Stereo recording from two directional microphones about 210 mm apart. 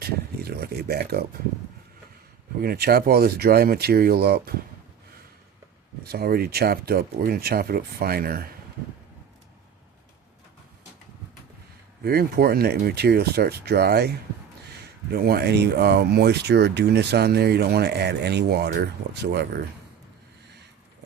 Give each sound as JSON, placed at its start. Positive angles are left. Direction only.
{"t": 0.0, "sound": "a sound", "side_deg": -45}
{"t": 2.6, "sound": "speech", "side_deg": -45}
{"t": 6.1, "sound": "speech", "side_deg": -45}
{"t": 12.0, "sound": "speech", "side_deg": -45}